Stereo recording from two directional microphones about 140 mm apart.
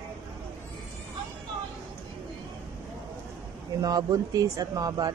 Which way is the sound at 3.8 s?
25° right (ahead or behind).